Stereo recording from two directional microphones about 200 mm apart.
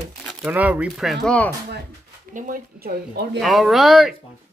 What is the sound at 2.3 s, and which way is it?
Speech, 45° right (ahead or behind).